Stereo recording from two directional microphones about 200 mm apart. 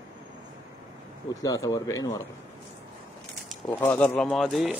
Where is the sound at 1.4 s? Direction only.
15° left (ahead or behind).